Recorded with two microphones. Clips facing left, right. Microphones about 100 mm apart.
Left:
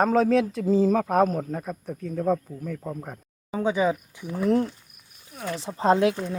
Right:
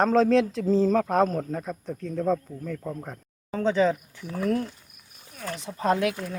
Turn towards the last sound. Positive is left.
turn(degrees=25)  # may be behind; listen again after turning